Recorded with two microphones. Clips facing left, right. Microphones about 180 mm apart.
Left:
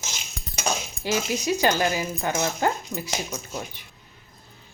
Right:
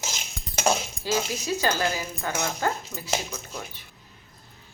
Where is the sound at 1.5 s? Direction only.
15° left (ahead or behind).